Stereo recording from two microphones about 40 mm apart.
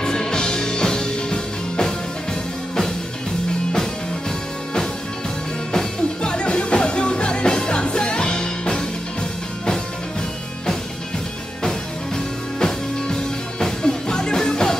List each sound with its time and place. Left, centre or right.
0.0 s music: centre
5.7 s music: centre
12.5 s music: centre